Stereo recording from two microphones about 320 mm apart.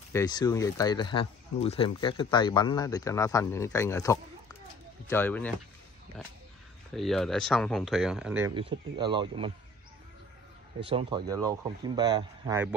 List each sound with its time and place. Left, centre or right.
0.1 s speech: centre
8.5 s speech: centre
10.8 s speech: centre